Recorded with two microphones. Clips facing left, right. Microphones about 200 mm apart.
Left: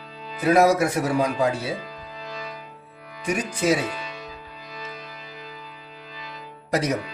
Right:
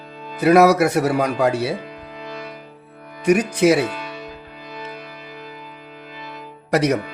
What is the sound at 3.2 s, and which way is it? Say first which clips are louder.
Speech: right 7 dB; 70° right (ahead or behind).